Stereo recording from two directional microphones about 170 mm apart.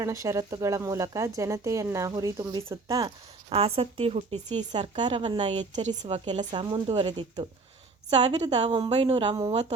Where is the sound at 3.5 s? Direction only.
35° right (ahead or behind).